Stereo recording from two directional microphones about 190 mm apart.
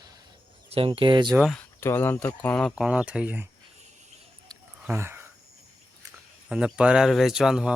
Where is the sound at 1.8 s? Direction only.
10° left (ahead or behind); by 3.5 s 10° right (ahead or behind).